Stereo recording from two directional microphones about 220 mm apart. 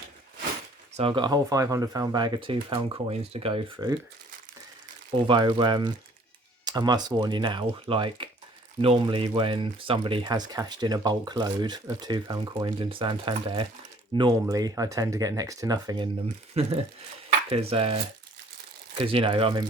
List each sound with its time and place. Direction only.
0.9 s speech: 25° right (ahead or behind)
5.3 s speech: 20° right (ahead or behind)
16.6 s speech: 30° right (ahead or behind)